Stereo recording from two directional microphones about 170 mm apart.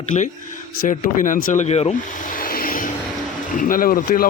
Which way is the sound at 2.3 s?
55° left (ahead or behind).